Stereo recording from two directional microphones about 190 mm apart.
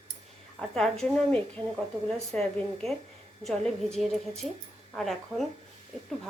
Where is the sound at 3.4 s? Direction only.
Centre (ahead or behind).